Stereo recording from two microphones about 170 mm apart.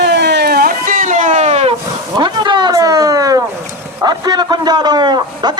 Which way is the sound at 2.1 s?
25° right (ahead or behind).